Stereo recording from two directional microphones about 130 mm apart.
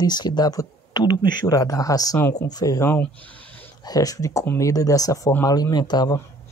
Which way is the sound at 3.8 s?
30° left (ahead or behind).